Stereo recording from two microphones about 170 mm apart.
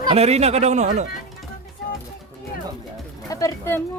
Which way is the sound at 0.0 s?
35° right (ahead or behind).